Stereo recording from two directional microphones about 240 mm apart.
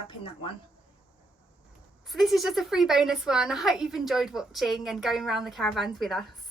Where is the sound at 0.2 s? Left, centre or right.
Left.